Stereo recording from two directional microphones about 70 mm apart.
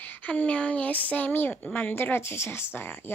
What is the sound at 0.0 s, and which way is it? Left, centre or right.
Speech, left.